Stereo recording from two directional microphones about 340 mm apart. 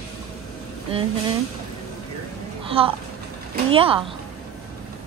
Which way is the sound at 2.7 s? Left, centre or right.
Centre.